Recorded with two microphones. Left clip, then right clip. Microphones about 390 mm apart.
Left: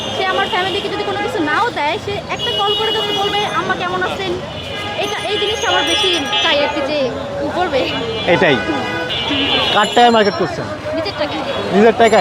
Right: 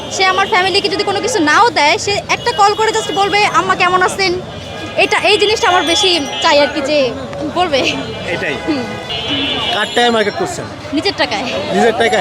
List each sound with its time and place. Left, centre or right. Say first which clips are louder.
0.2 s a sound: right 5 dB; right
1.5 s speech: right 8 dB; right
7.6 s speech: right 4 dB; right
8.3 s speech: left 7 dB; left
9.7 s speech: left 2 dB; centre
11.8 s speech: left 2 dB; centre